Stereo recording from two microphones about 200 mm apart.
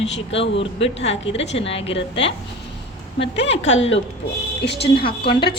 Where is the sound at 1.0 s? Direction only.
30° left (ahead or behind).